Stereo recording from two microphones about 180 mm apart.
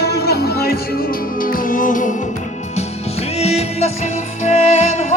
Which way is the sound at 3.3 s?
35° left (ahead or behind).